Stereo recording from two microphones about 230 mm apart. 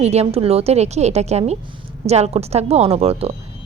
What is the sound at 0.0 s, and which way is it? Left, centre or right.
A woman's voice, right.